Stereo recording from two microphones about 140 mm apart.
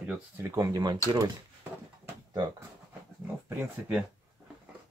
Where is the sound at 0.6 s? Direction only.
25° right (ahead or behind).